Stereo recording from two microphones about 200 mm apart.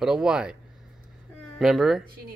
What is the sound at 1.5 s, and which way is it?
Speech, centre (ahead or behind).